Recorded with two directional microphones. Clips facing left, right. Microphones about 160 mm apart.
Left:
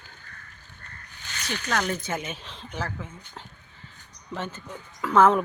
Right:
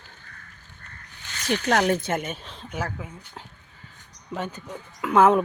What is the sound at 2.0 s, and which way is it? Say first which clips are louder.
Speech: right 4 dB; 50° right (ahead or behind).